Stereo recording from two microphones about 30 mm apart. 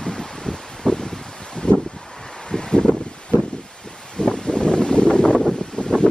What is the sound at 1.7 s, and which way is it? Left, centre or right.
Wind, left.